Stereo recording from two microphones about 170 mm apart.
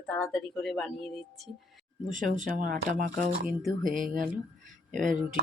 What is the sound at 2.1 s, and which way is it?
Speech, 50° right (ahead or behind).